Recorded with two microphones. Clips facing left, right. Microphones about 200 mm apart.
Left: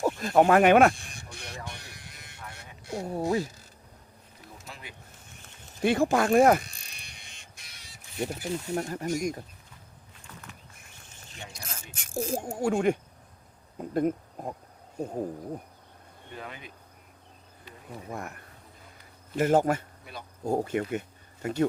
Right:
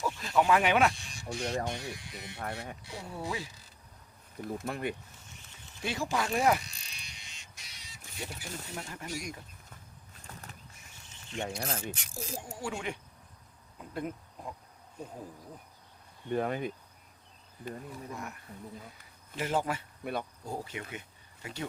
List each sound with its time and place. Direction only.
0.0 s speech: 50° left (ahead or behind)
1.3 s speech: 55° right (ahead or behind)
2.0 s speech: 50° left (ahead or behind)
2.4 s speech: 55° right (ahead or behind)
2.8 s speech: 45° left (ahead or behind)
4.4 s speech: 55° right (ahead or behind)
5.8 s speech: 55° left (ahead or behind)
11.4 s speech: 50° right (ahead or behind)
11.9 s speech: 50° left (ahead or behind)
16.3 s speech: 50° right (ahead or behind)
18.1 s speech: 55° left (ahead or behind)
20.0 s speech: 55° right (ahead or behind)
20.4 s speech: 50° left (ahead or behind)